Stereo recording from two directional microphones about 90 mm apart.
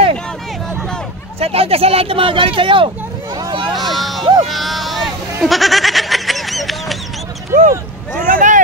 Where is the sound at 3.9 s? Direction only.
Centre (ahead or behind).